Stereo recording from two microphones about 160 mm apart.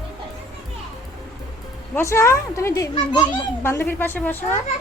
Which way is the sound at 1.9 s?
15° left (ahead or behind).